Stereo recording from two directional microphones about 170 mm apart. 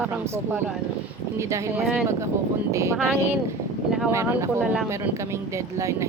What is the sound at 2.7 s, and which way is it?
Speech, 15° right (ahead or behind).